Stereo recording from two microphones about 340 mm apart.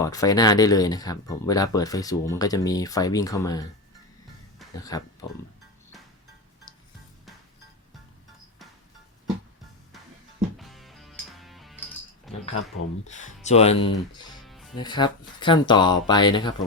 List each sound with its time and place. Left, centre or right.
0.0 s speech: centre
4.8 s speech: centre
10.6 s music: centre
12.3 s a sound: centre
13.1 s speech: left
14.3 s music: centre
14.8 s speech: centre